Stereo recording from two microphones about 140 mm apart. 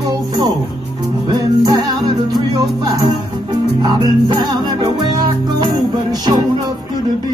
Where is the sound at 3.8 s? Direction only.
30° right (ahead or behind).